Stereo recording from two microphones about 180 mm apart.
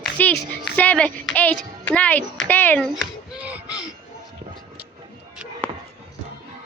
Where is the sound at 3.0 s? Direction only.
5° right (ahead or behind).